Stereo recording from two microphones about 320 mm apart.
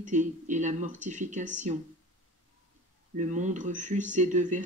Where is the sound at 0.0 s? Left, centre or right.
Right.